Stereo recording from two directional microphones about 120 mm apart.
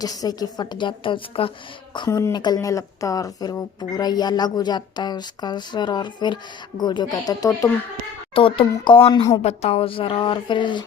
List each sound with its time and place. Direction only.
0.0 s a woman's voice: 30° left (ahead or behind)
2.0 s a woman's voice: 25° left (ahead or behind)
2.3 s a woman's voice: 35° left (ahead or behind)
8.4 s speech: 45° left (ahead or behind)
9.4 s speech: 60° left (ahead or behind); by 10.8 s 40° left (ahead or behind)